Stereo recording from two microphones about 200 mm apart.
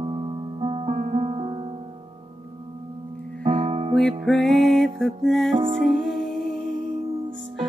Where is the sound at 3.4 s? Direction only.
40° right (ahead or behind).